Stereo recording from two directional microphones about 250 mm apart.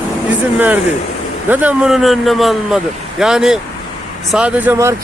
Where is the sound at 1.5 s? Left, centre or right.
Centre.